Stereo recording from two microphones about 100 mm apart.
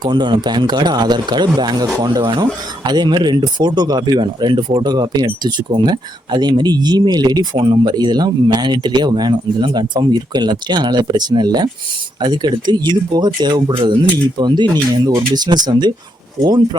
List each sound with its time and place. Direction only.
0.0 s speech: 50° right (ahead or behind)